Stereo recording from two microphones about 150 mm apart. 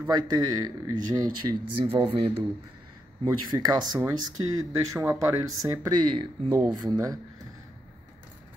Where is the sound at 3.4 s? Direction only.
30° right (ahead or behind).